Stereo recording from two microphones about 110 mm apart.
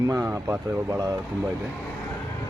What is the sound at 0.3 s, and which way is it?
Speech, 25° right (ahead or behind).